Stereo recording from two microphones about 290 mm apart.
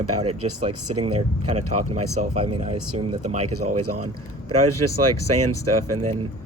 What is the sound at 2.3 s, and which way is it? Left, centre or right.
Speech, right.